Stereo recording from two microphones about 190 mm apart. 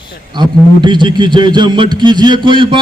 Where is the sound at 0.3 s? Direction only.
25° right (ahead or behind).